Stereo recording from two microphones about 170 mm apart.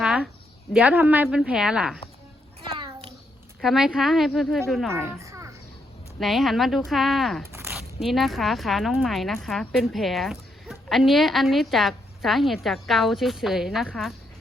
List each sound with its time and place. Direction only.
0.0 s a sound: 5° right (ahead or behind)
0.7 s a woman's voice: 10° right (ahead or behind)
2.7 s a sound: 30° right (ahead or behind)
3.6 s a woman's voice: centre (ahead or behind)
5.1 s children playing: 20° right (ahead or behind)
6.1 s a woman's voice: centre (ahead or behind)